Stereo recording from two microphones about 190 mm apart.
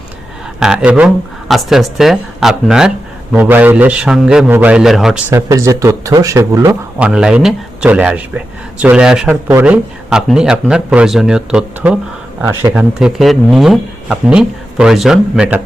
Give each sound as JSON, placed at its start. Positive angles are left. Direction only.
{"t": 0.6, "sound": "speech", "side_deg": -5}
{"t": 5.3, "sound": "speech", "side_deg": -15}